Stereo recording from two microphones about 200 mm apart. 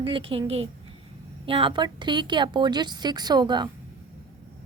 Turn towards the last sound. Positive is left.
turn(degrees=-20)  # may be behind; listen again after turning